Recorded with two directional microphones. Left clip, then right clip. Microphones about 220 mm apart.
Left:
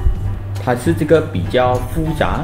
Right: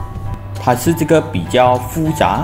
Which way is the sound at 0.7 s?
30° right (ahead or behind).